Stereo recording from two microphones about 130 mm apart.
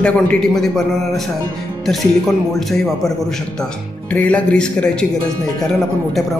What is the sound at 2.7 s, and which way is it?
A man's voice, 5° left (ahead or behind).